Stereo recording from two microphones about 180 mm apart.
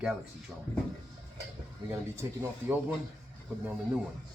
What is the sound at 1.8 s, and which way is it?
Speech, 15° right (ahead or behind).